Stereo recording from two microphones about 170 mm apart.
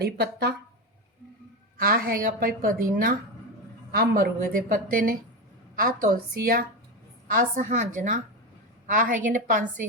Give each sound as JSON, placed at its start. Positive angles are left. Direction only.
{"t": 0.0, "sound": "speech", "side_deg": -70}
{"t": 1.8, "sound": "a woman's voice", "side_deg": -60}
{"t": 3.9, "sound": "a woman's voice", "side_deg": -60}